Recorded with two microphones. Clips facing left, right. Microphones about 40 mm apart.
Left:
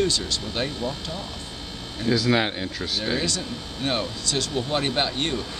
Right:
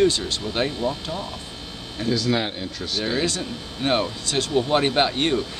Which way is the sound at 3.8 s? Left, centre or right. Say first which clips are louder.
Right 4 dB; right.